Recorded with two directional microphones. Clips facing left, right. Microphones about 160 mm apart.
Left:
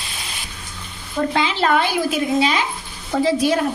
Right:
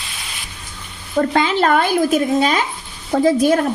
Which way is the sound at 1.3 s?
50° right (ahead or behind).